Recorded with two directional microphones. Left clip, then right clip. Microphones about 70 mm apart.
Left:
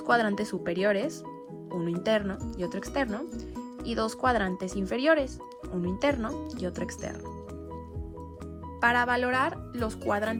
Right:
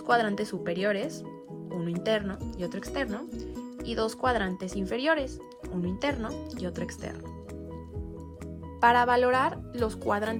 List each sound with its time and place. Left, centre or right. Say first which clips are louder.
0.0 s speech: even; right
8.8 s speech: right 3 dB; right
10.1 s speech: left 1 dB; right